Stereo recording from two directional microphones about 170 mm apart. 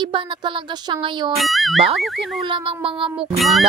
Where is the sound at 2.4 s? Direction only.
30° right (ahead or behind).